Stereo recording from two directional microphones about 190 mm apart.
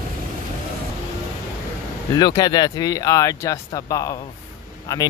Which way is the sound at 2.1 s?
20° left (ahead or behind).